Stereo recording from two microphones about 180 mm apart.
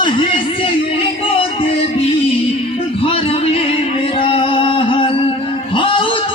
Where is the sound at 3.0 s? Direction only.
30° left (ahead or behind).